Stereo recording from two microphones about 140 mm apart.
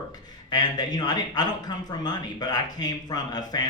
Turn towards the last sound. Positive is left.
turn(degrees=30)  # may be behind; listen again after turning